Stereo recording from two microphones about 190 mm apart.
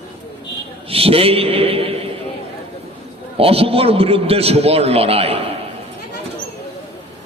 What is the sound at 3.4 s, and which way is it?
A man's voice, 30° right (ahead or behind).